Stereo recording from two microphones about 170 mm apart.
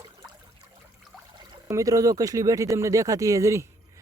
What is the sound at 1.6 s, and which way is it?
Speech, 20° right (ahead or behind).